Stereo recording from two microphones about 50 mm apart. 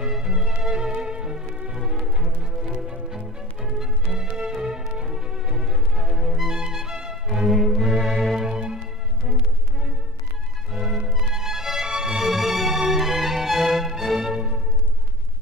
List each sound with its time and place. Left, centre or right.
0.1 s music: centre
10.7 s music: centre